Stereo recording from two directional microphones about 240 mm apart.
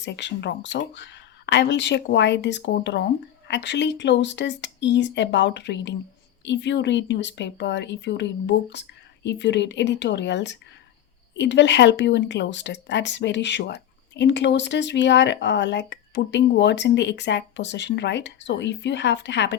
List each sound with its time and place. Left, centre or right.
0.0 s speech: left